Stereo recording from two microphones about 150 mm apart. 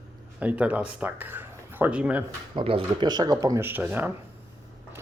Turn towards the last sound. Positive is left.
turn(degrees=-10)  # may be behind; listen again after turning